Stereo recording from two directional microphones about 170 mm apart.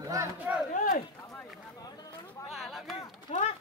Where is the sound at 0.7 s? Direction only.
50° left (ahead or behind).